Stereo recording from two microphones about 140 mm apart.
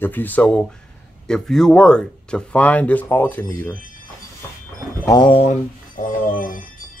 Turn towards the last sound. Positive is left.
turn(degrees=75)  # may be behind; listen again after turning